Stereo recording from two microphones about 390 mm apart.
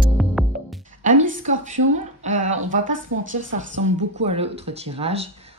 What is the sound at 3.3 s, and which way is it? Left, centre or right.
Speech, centre.